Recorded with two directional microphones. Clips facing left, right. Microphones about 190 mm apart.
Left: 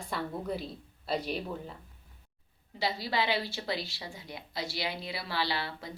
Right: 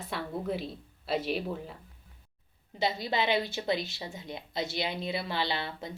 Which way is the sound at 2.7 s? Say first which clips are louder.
Right 2 dB; 20° right (ahead or behind).